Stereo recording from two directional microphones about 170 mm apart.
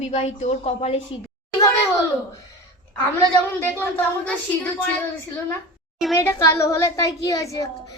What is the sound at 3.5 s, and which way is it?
A child's voice, 10° left (ahead or behind).